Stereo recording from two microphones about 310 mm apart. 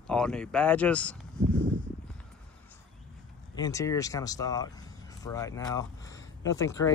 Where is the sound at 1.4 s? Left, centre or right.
Right.